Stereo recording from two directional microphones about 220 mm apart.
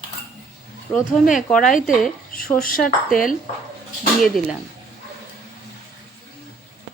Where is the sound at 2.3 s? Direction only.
40° left (ahead or behind).